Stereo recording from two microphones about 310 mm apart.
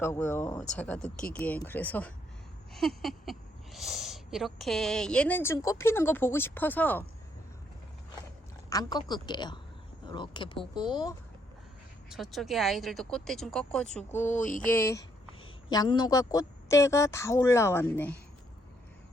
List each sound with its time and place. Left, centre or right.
0.0 s speech: centre
8.7 s a woman's voice: centre
12.0 s speech: centre
14.2 s a sound: left
14.6 s a woman's voice: centre